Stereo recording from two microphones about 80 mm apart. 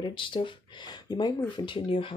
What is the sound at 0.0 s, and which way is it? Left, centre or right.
Speech, left.